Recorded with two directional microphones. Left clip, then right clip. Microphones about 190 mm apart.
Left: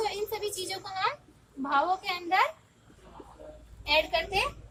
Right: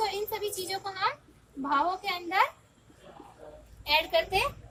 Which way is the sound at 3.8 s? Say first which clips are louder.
Right 1 dB; 20° right (ahead or behind).